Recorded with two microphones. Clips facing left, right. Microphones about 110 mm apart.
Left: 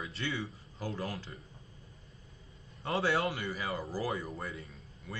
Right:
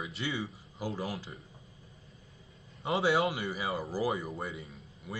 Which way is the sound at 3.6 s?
15° right (ahead or behind).